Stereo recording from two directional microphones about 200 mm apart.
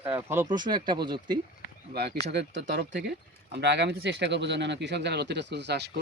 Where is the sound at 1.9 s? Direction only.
55° right (ahead or behind).